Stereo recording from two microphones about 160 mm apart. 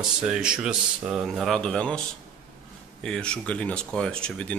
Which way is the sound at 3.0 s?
5° left (ahead or behind).